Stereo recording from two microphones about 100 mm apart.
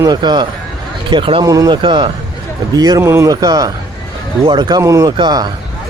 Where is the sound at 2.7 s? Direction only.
40° right (ahead or behind).